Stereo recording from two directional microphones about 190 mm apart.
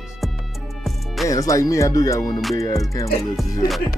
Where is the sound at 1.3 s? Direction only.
15° left (ahead or behind).